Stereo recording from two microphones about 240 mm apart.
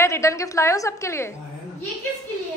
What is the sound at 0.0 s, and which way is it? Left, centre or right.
A woman's voice, centre.